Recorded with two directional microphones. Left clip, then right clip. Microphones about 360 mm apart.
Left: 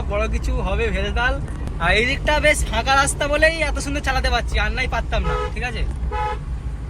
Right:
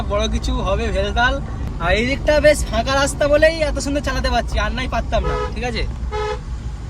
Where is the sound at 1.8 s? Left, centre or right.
Left.